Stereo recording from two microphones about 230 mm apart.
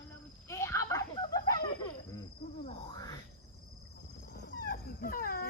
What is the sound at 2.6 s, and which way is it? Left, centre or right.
Hoot, left.